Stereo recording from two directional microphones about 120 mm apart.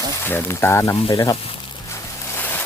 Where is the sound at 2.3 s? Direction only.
15° left (ahead or behind).